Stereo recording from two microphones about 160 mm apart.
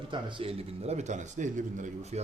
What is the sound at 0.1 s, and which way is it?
Speech, 30° right (ahead or behind).